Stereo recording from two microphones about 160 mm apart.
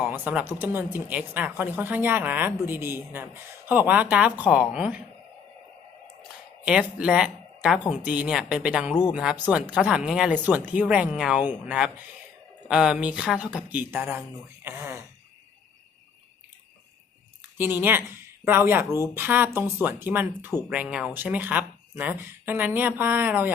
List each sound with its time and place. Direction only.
0.0 s speech: 10° right (ahead or behind)
6.7 s speech: 5° right (ahead or behind)
17.6 s speech: 15° right (ahead or behind)